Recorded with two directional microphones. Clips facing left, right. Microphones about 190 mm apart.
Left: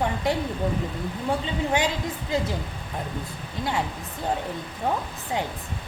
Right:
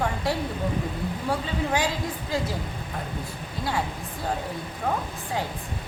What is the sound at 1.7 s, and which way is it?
Speech, 20° left (ahead or behind).